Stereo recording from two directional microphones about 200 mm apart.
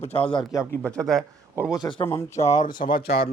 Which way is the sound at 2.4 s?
35° left (ahead or behind).